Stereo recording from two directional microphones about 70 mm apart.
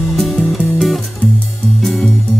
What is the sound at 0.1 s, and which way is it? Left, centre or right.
Music, centre.